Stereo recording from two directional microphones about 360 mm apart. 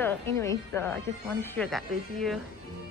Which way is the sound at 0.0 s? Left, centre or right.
Centre.